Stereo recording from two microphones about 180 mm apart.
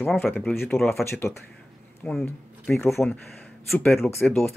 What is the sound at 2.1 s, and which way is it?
Speech, 5° left (ahead or behind).